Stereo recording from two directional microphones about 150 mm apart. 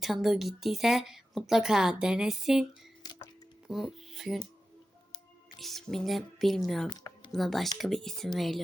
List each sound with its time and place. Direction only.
0.0 s a woman's voice: centre (ahead or behind)
3.7 s music: centre (ahead or behind)
5.5 s a woman's voice: centre (ahead or behind)
6.9 s a sound: 30° left (ahead or behind)
7.3 s a woman's voice: centre (ahead or behind)